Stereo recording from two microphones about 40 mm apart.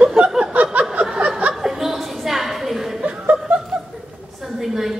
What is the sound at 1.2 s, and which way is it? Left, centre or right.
Chuckle, right.